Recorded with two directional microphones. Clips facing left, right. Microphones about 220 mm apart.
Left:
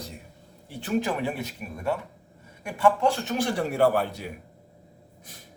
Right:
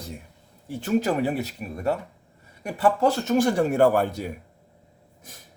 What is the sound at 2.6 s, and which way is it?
A man's voice, 40° right (ahead or behind).